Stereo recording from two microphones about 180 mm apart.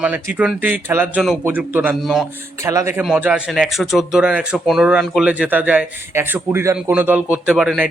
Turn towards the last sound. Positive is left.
turn(degrees=-5)  # may be behind; listen again after turning